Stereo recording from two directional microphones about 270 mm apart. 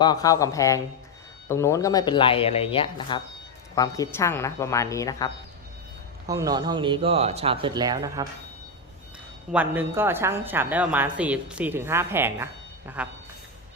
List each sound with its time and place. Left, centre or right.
0.0 s speech: centre
6.2 s a woman's voice: centre
9.5 s a woman's voice: centre